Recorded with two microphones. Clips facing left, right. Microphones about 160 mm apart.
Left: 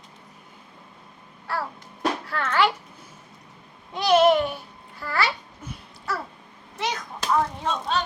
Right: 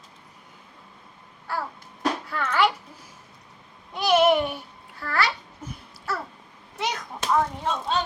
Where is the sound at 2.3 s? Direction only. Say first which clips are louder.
Even; 10° right (ahead or behind).